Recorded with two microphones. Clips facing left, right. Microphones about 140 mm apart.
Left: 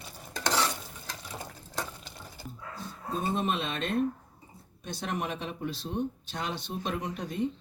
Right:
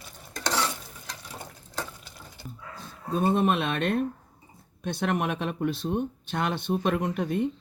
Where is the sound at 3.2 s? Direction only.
65° right (ahead or behind).